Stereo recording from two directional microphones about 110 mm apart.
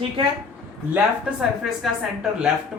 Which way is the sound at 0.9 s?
5° right (ahead or behind).